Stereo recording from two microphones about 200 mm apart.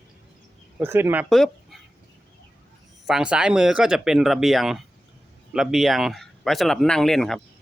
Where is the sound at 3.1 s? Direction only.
5° right (ahead or behind).